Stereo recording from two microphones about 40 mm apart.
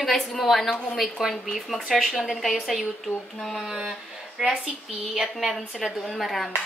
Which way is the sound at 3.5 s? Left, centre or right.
Centre.